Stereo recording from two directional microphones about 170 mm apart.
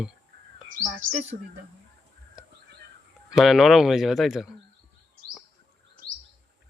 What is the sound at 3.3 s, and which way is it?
Speech, centre (ahead or behind).